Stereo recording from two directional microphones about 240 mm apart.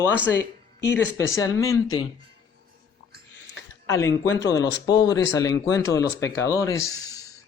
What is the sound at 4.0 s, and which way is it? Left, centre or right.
Speech, centre.